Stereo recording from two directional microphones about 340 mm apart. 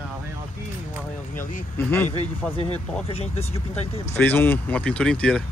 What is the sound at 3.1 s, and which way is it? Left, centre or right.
Speech, centre.